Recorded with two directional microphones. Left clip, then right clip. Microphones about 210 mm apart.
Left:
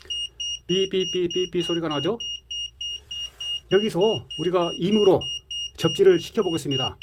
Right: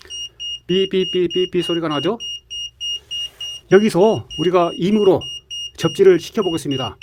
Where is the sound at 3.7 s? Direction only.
40° right (ahead or behind); by 6.9 s 20° right (ahead or behind).